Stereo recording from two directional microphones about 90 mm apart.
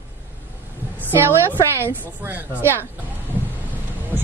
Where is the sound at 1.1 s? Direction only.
25° right (ahead or behind).